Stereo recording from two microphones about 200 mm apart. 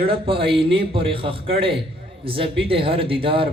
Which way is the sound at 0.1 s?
25° right (ahead or behind).